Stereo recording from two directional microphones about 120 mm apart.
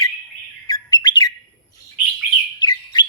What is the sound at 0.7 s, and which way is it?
Bird, 35° left (ahead or behind).